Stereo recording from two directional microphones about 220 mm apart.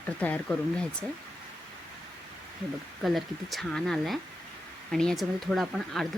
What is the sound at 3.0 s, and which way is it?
Speech, centre (ahead or behind).